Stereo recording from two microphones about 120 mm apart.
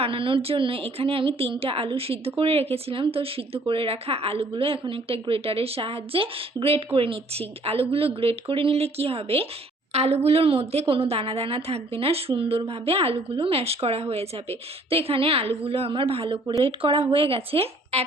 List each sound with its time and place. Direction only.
0.0 s a woman's voice: 45° right (ahead or behind)